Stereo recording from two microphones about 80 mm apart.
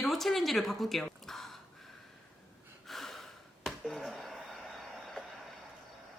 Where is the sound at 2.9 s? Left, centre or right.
Centre.